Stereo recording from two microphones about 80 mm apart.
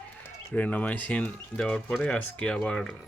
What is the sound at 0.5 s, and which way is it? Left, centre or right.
Speech, centre.